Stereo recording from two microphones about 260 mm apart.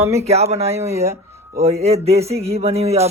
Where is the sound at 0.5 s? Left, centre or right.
Right.